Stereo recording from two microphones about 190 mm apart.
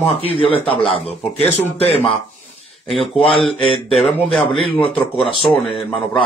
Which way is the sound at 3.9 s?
Centre (ahead or behind).